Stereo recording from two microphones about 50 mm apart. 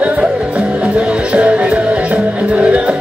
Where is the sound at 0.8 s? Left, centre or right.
Right.